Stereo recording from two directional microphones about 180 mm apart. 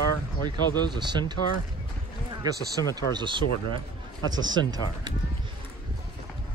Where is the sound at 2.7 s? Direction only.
20° right (ahead or behind).